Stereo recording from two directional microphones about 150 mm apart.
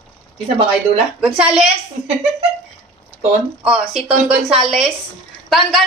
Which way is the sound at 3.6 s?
10° right (ahead or behind).